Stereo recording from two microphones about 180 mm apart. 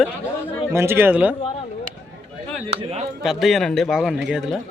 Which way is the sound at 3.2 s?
Centre (ahead or behind).